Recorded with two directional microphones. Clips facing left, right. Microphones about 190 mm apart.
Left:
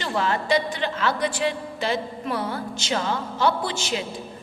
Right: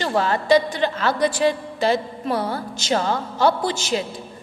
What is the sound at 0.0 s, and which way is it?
A woman's voice, 40° right (ahead or behind).